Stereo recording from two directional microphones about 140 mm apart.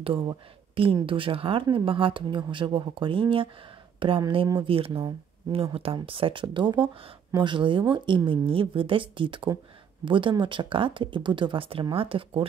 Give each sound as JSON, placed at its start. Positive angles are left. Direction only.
{"t": 0.0, "sound": "speech", "side_deg": -40}